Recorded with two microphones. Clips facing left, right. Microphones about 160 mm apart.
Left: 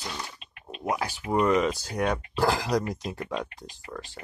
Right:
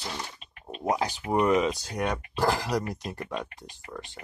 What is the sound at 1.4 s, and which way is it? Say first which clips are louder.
Speech: even; 5° right (ahead or behind).